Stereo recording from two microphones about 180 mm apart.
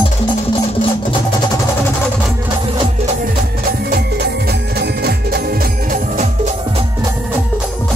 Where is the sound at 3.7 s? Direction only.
60° right (ahead or behind).